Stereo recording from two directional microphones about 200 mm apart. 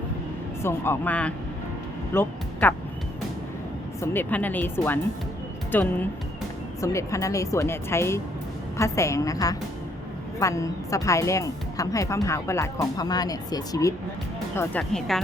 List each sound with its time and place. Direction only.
0.6 s a woman's voice: 10° left (ahead or behind)
4.0 s a woman's voice: 10° left (ahead or behind)